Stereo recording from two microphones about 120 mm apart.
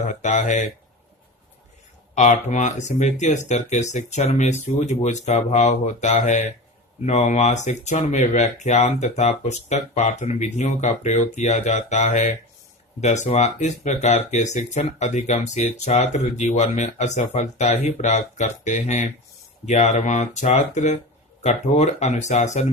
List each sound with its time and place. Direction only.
0.1 s speech: 90° left
2.1 s speech: 85° left
7.0 s speech: 75° left (ahead or behind)
19.6 s speech: 80° left